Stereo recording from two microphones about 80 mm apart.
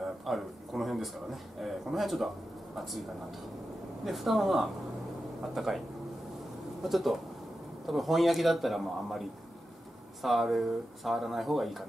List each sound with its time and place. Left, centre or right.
0.0 s a man's voice: centre
6.8 s a man's voice: centre